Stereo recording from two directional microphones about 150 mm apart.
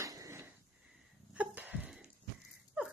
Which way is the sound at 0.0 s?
20° right (ahead or behind).